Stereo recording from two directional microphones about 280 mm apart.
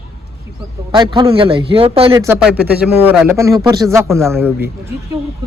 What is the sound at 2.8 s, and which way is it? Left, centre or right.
Speech, centre.